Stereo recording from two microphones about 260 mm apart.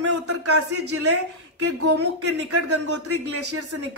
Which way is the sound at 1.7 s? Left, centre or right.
Right.